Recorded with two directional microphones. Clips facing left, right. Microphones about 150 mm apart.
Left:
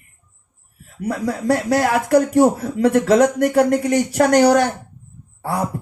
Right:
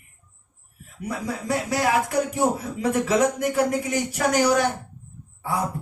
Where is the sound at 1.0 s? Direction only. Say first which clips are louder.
Left 7 dB; 65° left (ahead or behind).